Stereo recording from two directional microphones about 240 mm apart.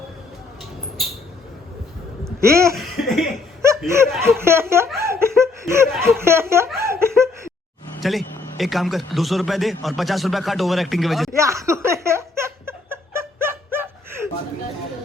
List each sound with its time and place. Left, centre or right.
2.2 s a sound: centre
2.7 s cough: centre
3.6 s laughter: centre
8.0 s a man's voice: centre
11.3 s laughter: centre